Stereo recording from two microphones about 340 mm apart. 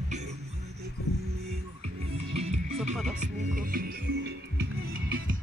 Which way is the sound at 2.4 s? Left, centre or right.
Centre.